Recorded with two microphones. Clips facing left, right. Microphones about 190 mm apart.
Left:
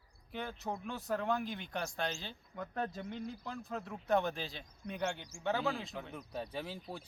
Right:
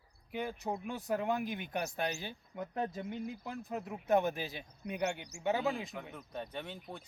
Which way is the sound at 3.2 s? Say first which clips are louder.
Right 2 dB; 15° right (ahead or behind).